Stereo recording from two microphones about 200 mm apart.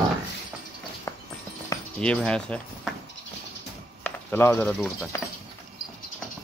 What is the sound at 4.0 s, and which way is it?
Speech, 10° left (ahead or behind).